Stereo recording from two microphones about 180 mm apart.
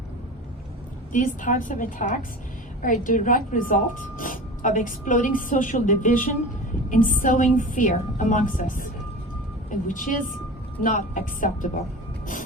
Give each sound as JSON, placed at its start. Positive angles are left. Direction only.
{"t": 1.1, "sound": "speech", "side_deg": 45}